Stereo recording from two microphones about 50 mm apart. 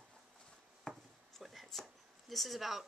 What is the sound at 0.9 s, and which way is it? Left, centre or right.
Chopping, centre.